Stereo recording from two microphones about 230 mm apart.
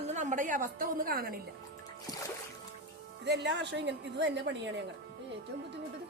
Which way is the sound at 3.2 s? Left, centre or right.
Right.